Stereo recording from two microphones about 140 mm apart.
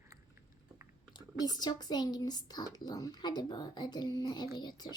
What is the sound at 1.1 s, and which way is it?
Speech, 30° left (ahead or behind).